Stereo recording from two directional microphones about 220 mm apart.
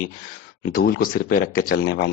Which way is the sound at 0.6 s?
45° left (ahead or behind).